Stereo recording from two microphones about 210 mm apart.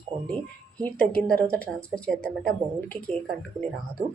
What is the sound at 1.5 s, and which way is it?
Speech, 5° left (ahead or behind).